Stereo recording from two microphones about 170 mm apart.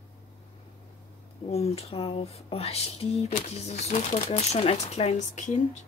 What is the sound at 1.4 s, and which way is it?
Speech, 40° left (ahead or behind).